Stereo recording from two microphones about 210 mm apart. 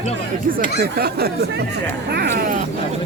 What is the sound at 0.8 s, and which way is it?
Speech, 50° right (ahead or behind).